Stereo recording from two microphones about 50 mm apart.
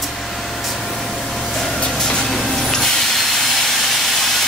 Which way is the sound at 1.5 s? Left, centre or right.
Centre.